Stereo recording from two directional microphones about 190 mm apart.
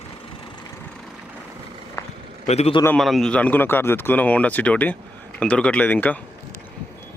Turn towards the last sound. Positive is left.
turn(degrees=10)  # may be behind; listen again after turning